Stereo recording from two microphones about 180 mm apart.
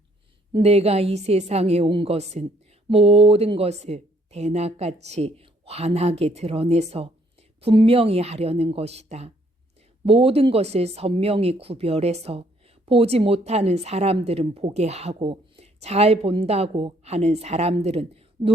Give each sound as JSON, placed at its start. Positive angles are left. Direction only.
{"t": 0.5, "sound": "speech", "side_deg": -35}